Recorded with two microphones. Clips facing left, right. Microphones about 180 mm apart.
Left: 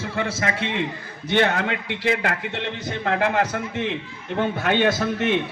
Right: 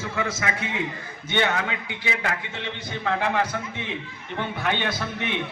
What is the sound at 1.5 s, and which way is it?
Speech, 60° left (ahead or behind).